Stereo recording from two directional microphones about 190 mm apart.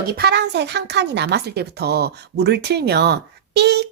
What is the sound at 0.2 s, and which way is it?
Speech, 60° right (ahead or behind).